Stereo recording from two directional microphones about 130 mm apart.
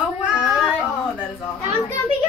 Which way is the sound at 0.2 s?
5° right (ahead or behind).